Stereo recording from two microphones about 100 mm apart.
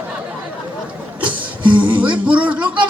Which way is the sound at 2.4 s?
10° right (ahead or behind).